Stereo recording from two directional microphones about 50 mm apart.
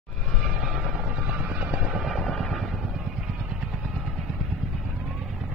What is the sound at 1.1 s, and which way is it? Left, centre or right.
Music, right.